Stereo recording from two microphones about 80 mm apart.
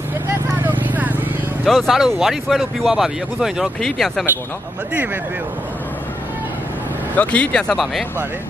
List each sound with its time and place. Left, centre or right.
0.3 s a sound: right
1.7 s speech: centre
3.8 s speech: centre
7.2 s speech: centre
7.7 s speech: centre